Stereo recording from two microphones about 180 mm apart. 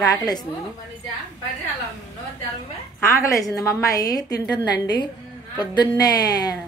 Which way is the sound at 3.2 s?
20° left (ahead or behind).